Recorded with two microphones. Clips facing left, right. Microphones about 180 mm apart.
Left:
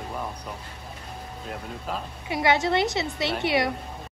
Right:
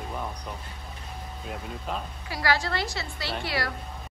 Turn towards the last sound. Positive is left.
turn(degrees=20)  # may be behind; listen again after turning